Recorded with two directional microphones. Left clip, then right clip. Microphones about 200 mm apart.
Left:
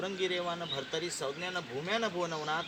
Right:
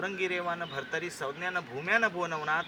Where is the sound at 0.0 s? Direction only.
15° left (ahead or behind).